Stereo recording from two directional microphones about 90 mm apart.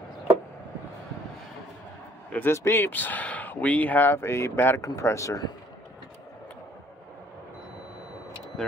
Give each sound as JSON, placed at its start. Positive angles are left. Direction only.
{"t": 2.3, "sound": "speech", "side_deg": 25}
{"t": 8.6, "sound": "speech", "side_deg": 0}